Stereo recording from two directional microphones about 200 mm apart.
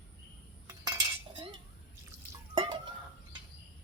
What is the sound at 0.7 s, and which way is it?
Cutlery, 20° right (ahead or behind).